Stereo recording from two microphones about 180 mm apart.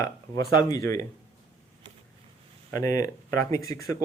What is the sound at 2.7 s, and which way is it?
Speech, 20° left (ahead or behind).